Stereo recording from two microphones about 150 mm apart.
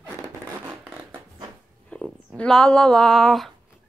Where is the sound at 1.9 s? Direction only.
5° left (ahead or behind).